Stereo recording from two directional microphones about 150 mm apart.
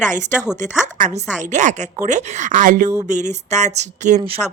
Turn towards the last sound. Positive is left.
turn(degrees=5)  # may be behind; listen again after turning